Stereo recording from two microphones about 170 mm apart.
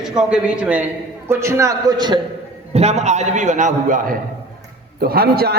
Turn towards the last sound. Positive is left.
turn(degrees=-65)  # may be behind; listen again after turning